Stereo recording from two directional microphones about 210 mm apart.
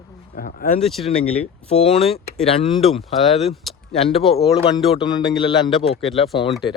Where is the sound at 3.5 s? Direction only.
30° left (ahead or behind).